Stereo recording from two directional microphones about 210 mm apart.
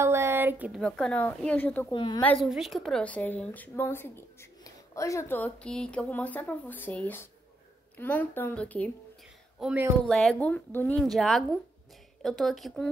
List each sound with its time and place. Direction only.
0.0 s a sound: 10° right (ahead or behind)
0.7 s a woman's voice: 5° left (ahead or behind)
1.9 s a woman's voice: 20° left (ahead or behind)
2.2 s a woman's voice: centre (ahead or behind)
9.6 s speech: 5° right (ahead or behind)